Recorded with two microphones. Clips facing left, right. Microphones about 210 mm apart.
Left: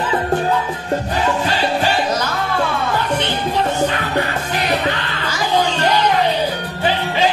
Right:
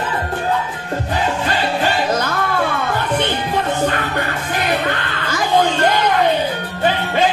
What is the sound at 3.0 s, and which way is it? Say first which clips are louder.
Music: right 1 dB; 55° right (ahead or behind).